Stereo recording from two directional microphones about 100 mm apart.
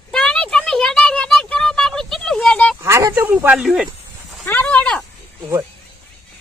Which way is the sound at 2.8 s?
30° right (ahead or behind).